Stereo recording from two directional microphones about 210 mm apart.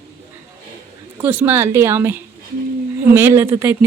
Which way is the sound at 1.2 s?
10° right (ahead or behind).